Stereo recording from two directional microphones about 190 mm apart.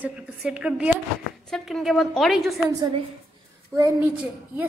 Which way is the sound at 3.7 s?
15° right (ahead or behind).